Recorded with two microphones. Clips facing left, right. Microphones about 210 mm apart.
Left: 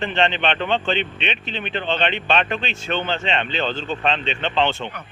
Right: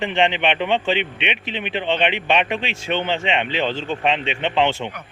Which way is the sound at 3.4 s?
75° right (ahead or behind).